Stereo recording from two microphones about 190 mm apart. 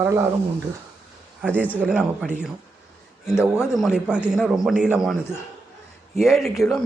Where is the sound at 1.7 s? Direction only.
5° right (ahead or behind).